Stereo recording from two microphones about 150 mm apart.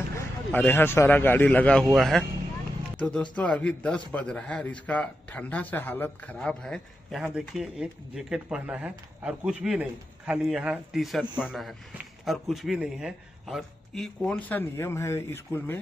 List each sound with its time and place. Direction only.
0.5 s a man's voice: 10° left (ahead or behind)
14.3 s a man's voice: 15° left (ahead or behind)